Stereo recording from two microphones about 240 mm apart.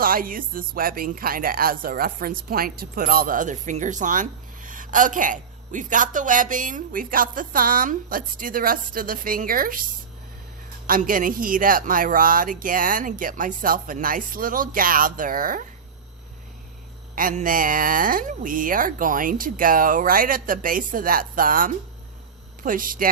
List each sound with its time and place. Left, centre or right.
0.0 s speech: right
10.8 s speech: right
17.2 s speech: right